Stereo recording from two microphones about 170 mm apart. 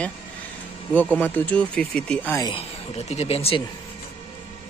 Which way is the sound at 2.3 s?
25° left (ahead or behind).